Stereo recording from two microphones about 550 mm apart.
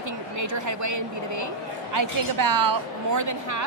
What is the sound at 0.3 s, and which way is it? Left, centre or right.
A woman's voice, right.